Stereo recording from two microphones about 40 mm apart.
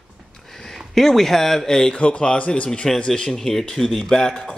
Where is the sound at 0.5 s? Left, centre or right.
Centre.